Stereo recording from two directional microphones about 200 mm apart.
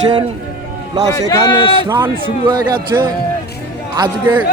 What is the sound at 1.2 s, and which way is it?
Speech, 20° left (ahead or behind).